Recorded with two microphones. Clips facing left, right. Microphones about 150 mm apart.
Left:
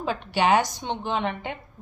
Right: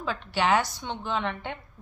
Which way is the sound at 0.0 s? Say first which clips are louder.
Left 3 dB; 15° left (ahead or behind).